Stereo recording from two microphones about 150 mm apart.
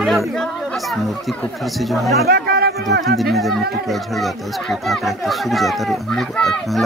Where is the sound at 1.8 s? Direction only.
Centre (ahead or behind).